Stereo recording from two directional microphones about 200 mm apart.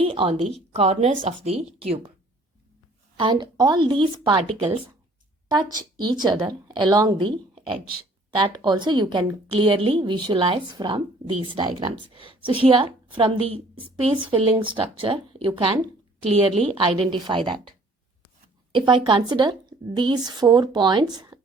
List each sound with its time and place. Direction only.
0.0 s a woman's voice: 25° right (ahead or behind)
3.2 s a woman's voice: 25° right (ahead or behind)
6.2 s a woman's voice: 20° right (ahead or behind)
8.4 s a woman's voice: 20° right (ahead or behind)